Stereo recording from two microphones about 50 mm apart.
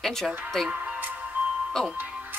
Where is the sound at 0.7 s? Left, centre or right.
Right.